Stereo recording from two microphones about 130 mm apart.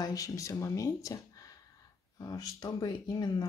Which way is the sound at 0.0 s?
25° left (ahead or behind).